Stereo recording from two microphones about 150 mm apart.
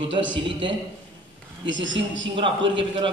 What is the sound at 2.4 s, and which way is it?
Speech, 35° right (ahead or behind).